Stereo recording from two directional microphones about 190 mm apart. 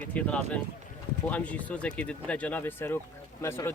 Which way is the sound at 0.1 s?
5° left (ahead or behind).